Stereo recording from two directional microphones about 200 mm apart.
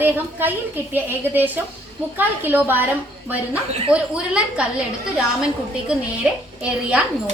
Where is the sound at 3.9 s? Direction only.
5° right (ahead or behind).